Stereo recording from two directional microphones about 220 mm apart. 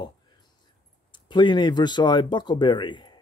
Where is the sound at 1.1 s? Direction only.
20° left (ahead or behind).